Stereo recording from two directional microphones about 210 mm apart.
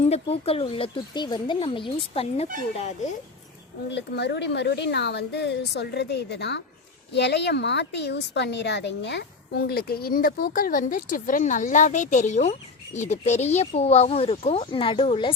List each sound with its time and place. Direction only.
0.0 s speech: 30° left (ahead or behind)
3.8 s a woman's voice: 55° left (ahead or behind); by 15.3 s 25° left (ahead or behind)